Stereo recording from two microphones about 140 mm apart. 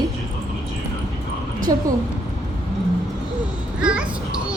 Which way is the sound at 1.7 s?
30° right (ahead or behind).